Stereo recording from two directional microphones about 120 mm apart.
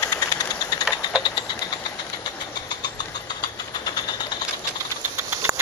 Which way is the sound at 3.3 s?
35° left (ahead or behind).